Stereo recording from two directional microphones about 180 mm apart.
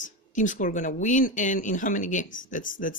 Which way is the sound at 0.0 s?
45° left (ahead or behind).